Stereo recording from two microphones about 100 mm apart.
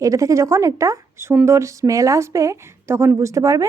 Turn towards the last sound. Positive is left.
turn(degrees=-30)  # may be behind; listen again after turning